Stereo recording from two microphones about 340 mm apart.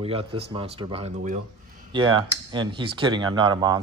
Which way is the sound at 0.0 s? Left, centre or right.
Centre.